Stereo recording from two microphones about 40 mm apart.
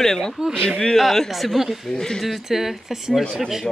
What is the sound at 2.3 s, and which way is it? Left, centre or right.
Speech, centre.